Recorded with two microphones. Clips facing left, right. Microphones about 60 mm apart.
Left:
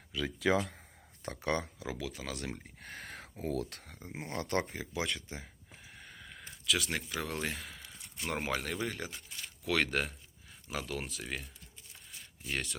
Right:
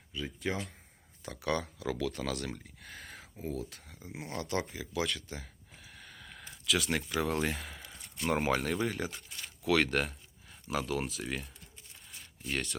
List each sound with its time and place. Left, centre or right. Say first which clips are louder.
0.1 s speech: left 5 dB; left
1.2 s speech: even; left
1.8 s speech: right 6 dB; centre
2.8 s speech: left 2 dB; left
5.0 s speech: right 1 dB; centre